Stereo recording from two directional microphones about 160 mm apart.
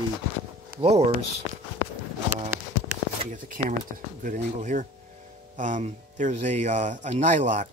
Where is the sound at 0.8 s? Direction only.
40° right (ahead or behind).